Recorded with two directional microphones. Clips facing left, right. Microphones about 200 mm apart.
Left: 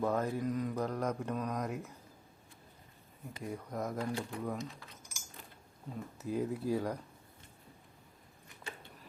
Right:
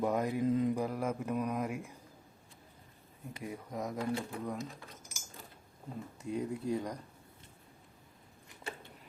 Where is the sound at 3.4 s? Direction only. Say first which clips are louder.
Left 1 dB; centre (ahead or behind).